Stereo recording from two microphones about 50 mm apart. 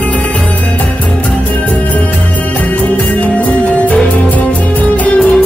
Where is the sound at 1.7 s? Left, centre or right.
Left.